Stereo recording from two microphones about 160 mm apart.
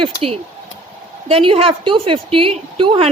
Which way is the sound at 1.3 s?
35° right (ahead or behind).